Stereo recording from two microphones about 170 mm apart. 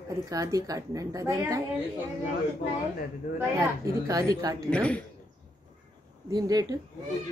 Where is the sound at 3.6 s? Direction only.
20° right (ahead or behind).